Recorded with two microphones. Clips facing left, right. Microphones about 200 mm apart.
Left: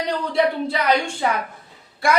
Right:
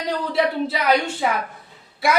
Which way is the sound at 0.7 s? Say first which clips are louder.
Even; 5° right (ahead or behind).